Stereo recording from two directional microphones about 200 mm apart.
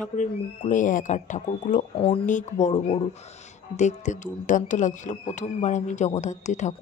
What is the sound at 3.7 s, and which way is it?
A woman's voice, 35° left (ahead or behind).